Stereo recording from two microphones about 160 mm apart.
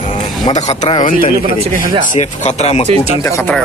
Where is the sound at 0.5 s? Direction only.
45° left (ahead or behind).